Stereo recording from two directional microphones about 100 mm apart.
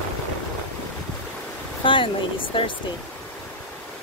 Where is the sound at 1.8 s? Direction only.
55° left (ahead or behind).